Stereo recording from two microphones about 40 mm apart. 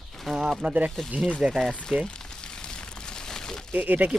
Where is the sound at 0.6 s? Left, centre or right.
Right.